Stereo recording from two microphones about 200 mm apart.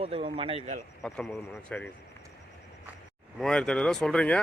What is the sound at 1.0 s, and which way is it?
Speech, centre (ahead or behind).